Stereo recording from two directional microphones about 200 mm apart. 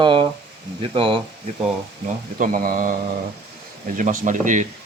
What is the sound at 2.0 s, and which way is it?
Speech, 45° right (ahead or behind).